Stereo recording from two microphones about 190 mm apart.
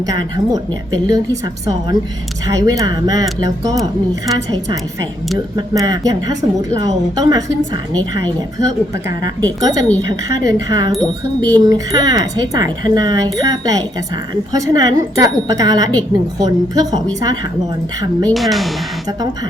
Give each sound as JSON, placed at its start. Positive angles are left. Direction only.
{"t": 0.1, "sound": "speech", "side_deg": -20}
{"t": 5.5, "sound": "speech", "side_deg": -20}
{"t": 18.3, "sound": "speech", "side_deg": 0}